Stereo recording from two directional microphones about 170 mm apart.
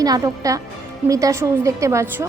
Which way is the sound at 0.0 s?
20° right (ahead or behind).